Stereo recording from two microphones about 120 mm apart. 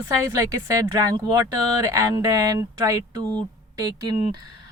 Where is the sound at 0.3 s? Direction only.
30° right (ahead or behind).